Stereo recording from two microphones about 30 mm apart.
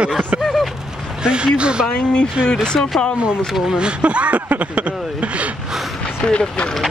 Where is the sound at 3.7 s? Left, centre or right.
Right.